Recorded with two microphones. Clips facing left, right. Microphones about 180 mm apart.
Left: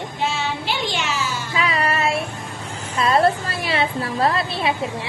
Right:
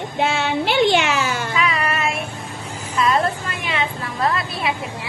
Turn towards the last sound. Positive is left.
turn(degrees=30)  # may be behind; listen again after turning